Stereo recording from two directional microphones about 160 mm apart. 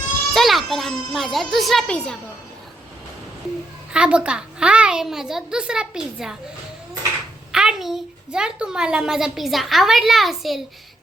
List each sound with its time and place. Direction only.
0.3 s speech: centre (ahead or behind)
3.9 s a child's voice: 5° right (ahead or behind)
7.5 s a woman's voice: 5° right (ahead or behind)